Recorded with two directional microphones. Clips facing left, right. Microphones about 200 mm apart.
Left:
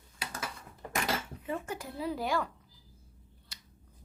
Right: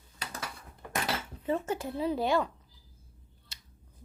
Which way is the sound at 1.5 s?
25° right (ahead or behind).